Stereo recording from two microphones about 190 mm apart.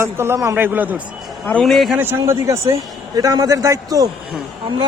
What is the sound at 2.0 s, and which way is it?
A man's voice, 15° right (ahead or behind).